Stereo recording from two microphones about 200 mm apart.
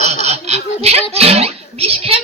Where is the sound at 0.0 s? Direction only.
35° right (ahead or behind).